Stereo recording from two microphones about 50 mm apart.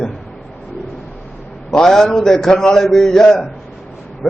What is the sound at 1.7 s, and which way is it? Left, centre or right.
A man's voice, centre.